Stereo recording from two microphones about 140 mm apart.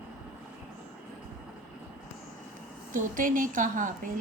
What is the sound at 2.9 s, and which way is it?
A woman's voice, 75° right (ahead or behind).